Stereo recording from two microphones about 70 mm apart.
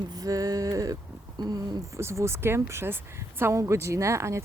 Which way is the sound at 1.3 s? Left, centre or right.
Right.